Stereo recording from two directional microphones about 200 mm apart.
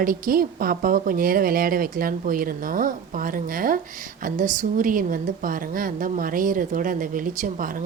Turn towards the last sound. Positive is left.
turn(degrees=-40)  # may be behind; listen again after turning